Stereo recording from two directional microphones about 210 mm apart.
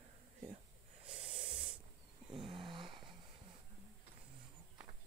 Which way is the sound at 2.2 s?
25° right (ahead or behind).